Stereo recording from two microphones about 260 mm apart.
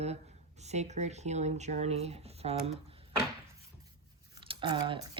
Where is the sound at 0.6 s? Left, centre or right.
Right.